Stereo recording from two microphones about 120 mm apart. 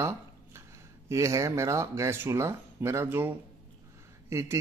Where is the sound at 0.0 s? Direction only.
20° right (ahead or behind).